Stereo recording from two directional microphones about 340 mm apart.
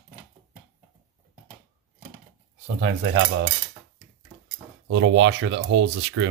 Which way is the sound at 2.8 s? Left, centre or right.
Right.